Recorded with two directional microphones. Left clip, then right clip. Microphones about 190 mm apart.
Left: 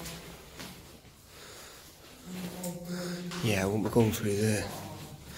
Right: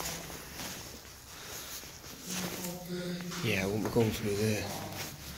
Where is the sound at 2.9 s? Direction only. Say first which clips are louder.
Even; 40° left (ahead or behind).